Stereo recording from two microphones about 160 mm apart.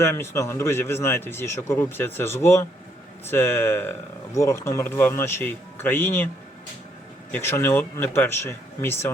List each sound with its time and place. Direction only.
0.0 s a man's voice: 15° left (ahead or behind)
7.3 s a man's voice: 15° left (ahead or behind)